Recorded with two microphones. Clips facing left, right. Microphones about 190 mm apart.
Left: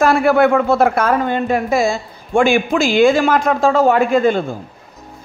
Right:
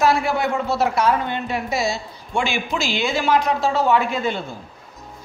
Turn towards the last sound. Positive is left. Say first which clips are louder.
# left 10 dB
turn(degrees=50)  # may be behind; listen again after turning